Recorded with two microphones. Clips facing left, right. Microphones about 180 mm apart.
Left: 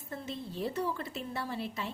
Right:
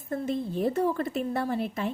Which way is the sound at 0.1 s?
50° right (ahead or behind).